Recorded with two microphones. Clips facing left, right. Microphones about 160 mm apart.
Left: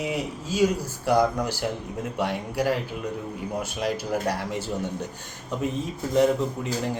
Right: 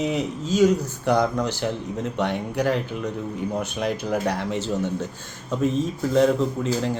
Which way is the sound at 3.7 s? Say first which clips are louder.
Even; 55° right (ahead or behind).